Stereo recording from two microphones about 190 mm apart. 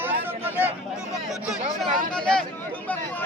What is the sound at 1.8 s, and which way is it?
Speech, 5° left (ahead or behind).